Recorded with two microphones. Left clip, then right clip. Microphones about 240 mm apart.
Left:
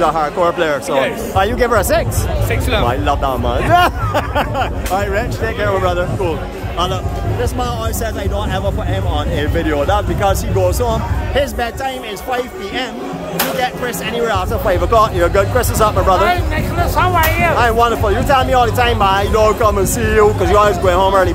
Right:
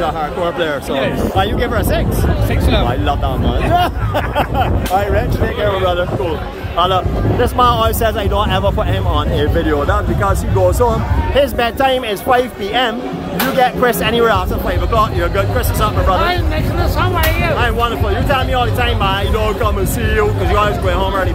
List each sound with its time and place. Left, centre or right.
0.0 s speech: centre
7.5 s speech: centre
9.4 s speech: centre
11.3 s speech: centre
14.7 s speech: left